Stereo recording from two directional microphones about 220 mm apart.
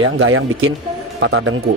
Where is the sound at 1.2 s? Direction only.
60° right (ahead or behind).